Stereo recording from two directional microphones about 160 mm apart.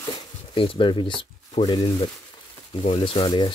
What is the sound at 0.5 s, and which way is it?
Speech, 35° left (ahead or behind).